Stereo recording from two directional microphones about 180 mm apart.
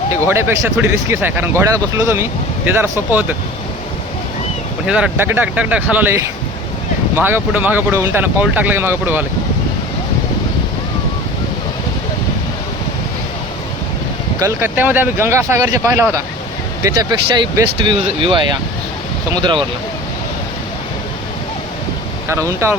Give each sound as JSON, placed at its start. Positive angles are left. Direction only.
{"t": 0.1, "sound": "speech", "side_deg": -15}
{"t": 4.9, "sound": "speech", "side_deg": -5}
{"t": 14.3, "sound": "speech", "side_deg": -15}
{"t": 22.3, "sound": "speech", "side_deg": -15}